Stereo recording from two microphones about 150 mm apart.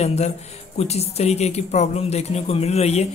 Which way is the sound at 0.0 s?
45° left (ahead or behind).